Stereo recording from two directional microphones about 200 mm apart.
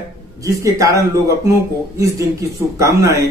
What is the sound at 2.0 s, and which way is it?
Speech, 15° right (ahead or behind).